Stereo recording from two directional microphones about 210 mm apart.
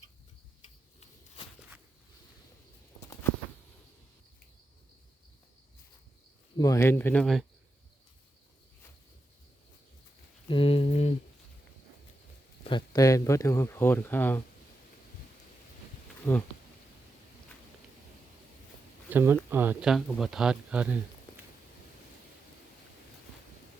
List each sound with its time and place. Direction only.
6.6 s speech: 15° left (ahead or behind)
10.5 s a sound: 25° left (ahead or behind)
12.6 s speech: 20° left (ahead or behind)
16.3 s speech: 15° left (ahead or behind)
19.1 s speech: 10° right (ahead or behind)